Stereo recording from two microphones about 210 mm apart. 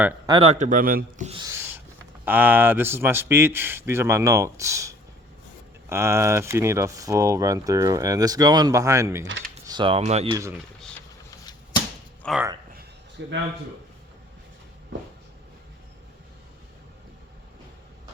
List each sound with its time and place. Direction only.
0.3 s speech: 20° right (ahead or behind)
0.6 s a man's voice: 40° right (ahead or behind)
1.3 s speech: 20° right (ahead or behind)
1.5 s owl: 10° right (ahead or behind)
2.2 s speech: 10° right (ahead or behind); by 10.3 s 30° right (ahead or behind)
10.3 s speech: 15° right (ahead or behind)
12.2 s speech: 5° left (ahead or behind)
13.2 s a man's voice: 60° right (ahead or behind)